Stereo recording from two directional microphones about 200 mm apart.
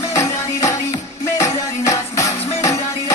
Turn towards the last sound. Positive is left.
turn(degrees=15)  # may be behind; listen again after turning